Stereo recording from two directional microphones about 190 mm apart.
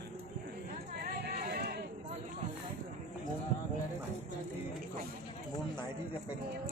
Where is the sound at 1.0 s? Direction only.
50° right (ahead or behind).